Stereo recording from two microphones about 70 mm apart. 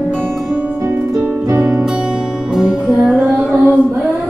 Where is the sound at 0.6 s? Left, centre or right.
Right.